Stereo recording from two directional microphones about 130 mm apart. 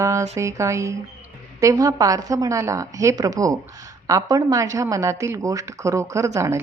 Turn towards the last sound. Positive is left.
turn(degrees=-20)  # may be behind; listen again after turning